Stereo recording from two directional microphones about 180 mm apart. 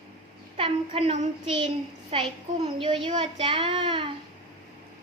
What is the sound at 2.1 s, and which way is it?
A child's voice, 30° right (ahead or behind).